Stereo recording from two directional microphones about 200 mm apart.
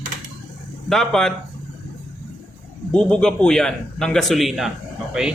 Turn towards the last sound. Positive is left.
turn(degrees=-5)  # may be behind; listen again after turning